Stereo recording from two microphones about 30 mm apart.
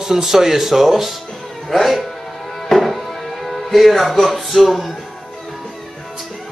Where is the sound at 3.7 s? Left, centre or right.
Centre.